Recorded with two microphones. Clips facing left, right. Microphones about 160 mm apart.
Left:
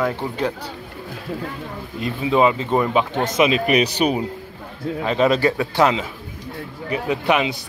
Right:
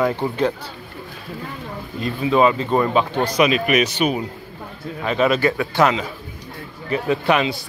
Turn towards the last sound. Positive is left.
turn(degrees=20)  # may be behind; listen again after turning